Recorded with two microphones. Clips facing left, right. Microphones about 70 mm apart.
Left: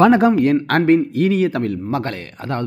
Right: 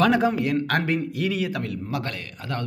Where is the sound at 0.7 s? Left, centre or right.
Left.